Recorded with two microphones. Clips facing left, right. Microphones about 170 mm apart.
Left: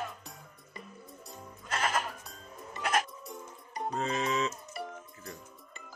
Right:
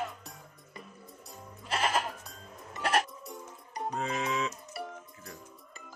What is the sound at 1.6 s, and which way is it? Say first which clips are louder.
Music: right 2 dB; 30° right (ahead or behind).